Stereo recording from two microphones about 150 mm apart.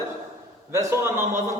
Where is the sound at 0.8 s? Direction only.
20° right (ahead or behind).